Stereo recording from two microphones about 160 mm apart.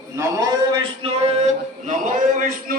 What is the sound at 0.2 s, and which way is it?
A man's voice, 25° right (ahead or behind).